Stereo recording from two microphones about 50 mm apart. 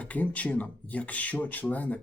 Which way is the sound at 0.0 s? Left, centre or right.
Left.